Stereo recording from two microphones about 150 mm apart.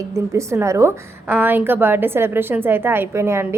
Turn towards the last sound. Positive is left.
turn(degrees=-15)  # may be behind; listen again after turning